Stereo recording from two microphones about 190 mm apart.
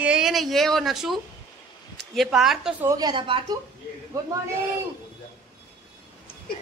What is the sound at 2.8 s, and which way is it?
Speech, 20° right (ahead or behind).